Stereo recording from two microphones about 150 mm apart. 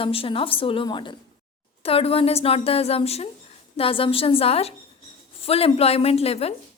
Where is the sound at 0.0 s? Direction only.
40° left (ahead or behind).